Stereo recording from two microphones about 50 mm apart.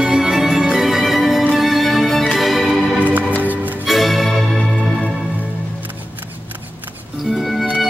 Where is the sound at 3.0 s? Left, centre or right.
Right.